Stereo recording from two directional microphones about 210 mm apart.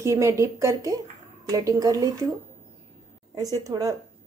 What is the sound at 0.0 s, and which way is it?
A woman's voice, 15° right (ahead or behind).